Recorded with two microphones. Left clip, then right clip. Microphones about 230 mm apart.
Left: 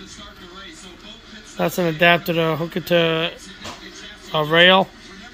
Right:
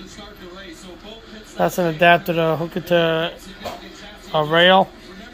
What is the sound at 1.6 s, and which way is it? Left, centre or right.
Speech, left.